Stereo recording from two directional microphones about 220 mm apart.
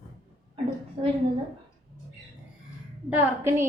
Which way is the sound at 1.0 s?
25° right (ahead or behind).